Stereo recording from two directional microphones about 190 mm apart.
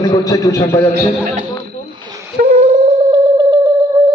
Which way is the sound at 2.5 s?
35° right (ahead or behind).